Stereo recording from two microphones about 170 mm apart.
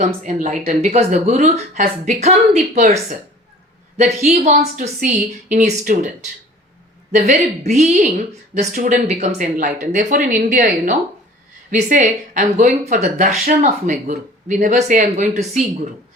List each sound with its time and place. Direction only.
0.0 s speech: 45° right (ahead or behind)
3.9 s speech: 40° right (ahead or behind)
7.1 s speech: 45° right (ahead or behind)